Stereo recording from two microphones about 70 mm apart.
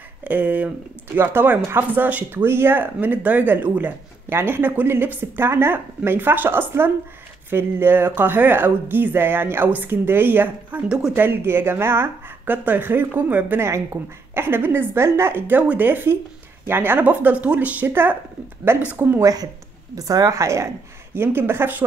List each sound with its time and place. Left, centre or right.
0.2 s speech: right
10.9 s speech: centre
11.1 s speech: right
13.7 s speech: right
19.2 s speech: right